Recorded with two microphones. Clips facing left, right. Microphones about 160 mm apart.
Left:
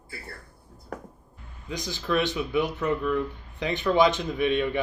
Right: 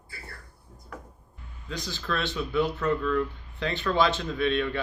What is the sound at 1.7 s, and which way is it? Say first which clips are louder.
Speech: left 5 dB; 15° left (ahead or behind).